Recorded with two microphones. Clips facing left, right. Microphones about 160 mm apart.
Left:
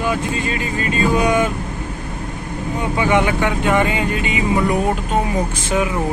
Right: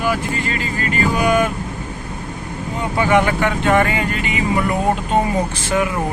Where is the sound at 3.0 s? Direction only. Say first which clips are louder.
Right 1 dB; 15° left (ahead or behind).